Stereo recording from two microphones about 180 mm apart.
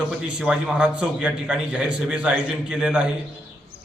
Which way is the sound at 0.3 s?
5° right (ahead or behind).